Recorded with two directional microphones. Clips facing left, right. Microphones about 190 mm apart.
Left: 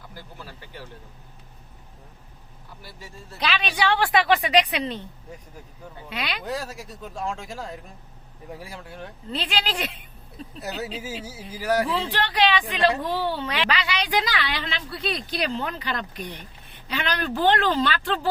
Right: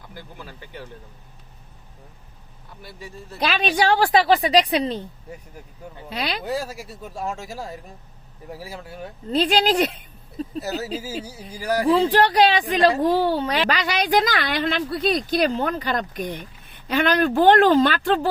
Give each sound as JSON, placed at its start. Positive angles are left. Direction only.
{"t": 3.4, "sound": "a woman's voice", "side_deg": -45}
{"t": 6.1, "sound": "a woman's voice", "side_deg": -35}
{"t": 6.4, "sound": "speech", "side_deg": -10}
{"t": 9.3, "sound": "a woman's voice", "side_deg": -40}
{"t": 10.6, "sound": "speech", "side_deg": 0}
{"t": 11.9, "sound": "a woman's voice", "side_deg": -45}